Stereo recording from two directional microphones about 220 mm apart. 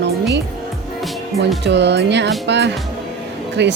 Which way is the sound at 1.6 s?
50° right (ahead or behind).